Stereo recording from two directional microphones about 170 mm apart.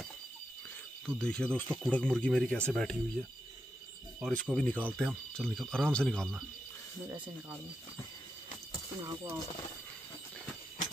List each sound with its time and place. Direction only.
1.0 s speech: 5° left (ahead or behind)
4.2 s speech: 5° left (ahead or behind)
9.0 s speech: 20° right (ahead or behind)